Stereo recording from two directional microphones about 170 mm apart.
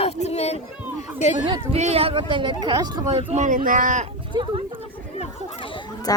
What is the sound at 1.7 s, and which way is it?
Speech, 40° right (ahead or behind).